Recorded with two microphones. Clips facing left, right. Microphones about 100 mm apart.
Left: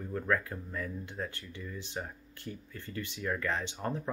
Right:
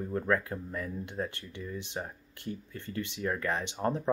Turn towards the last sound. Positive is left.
turn(degrees=-25)  # may be behind; listen again after turning